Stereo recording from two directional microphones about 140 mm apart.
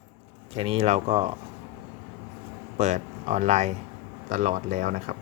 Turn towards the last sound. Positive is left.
turn(degrees=-60)  # may be behind; listen again after turning